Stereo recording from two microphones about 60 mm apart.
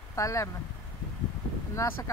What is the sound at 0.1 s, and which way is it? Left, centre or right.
Speech, left.